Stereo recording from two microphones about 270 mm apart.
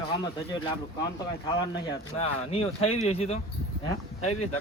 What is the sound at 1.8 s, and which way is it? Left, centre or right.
Speech, left.